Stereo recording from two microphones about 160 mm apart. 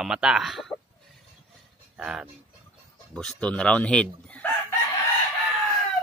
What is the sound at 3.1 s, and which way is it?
A man's voice, 5° left (ahead or behind).